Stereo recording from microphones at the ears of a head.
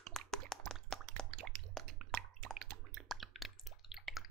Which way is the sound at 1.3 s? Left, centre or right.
Right.